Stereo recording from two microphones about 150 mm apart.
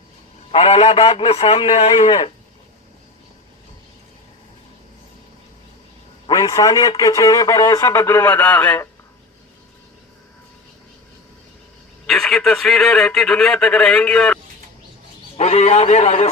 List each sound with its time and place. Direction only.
0.5 s a man's voice: 40° left (ahead or behind)
6.3 s speech: 25° left (ahead or behind)
12.0 s a man's voice: centre (ahead or behind)
15.4 s a man's voice: 45° left (ahead or behind)